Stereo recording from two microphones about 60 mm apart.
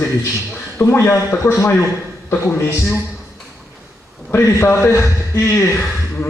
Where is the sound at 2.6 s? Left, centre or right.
Left.